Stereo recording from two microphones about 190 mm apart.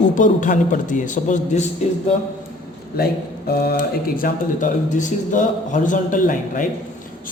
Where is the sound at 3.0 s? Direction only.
55° left (ahead or behind).